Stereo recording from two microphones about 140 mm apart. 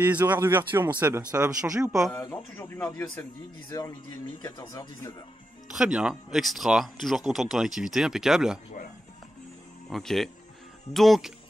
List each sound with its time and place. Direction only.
0.0 s speech: 15° right (ahead or behind)
2.1 s speech: 15° left (ahead or behind)
4.4 s speech: 30° left (ahead or behind)
5.7 s speech: 5° right (ahead or behind)
9.8 s speech: centre (ahead or behind)